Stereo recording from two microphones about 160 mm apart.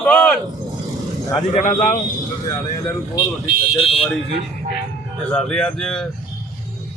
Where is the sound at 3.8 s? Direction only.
35° left (ahead or behind).